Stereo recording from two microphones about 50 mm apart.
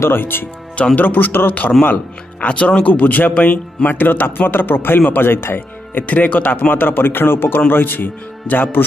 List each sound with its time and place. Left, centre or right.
0.1 s speech: left
0.9 s speech: left
6.0 s speech: left